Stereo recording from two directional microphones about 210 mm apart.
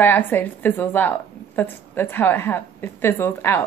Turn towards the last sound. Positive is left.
turn(degrees=10)  # may be behind; listen again after turning